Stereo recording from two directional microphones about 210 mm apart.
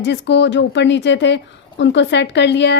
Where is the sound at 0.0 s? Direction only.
55° left (ahead or behind).